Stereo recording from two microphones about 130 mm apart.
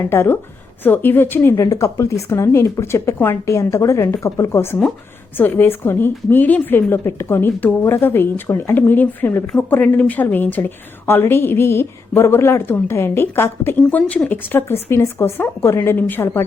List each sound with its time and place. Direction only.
0.1 s a woman's voice: 15° left (ahead or behind)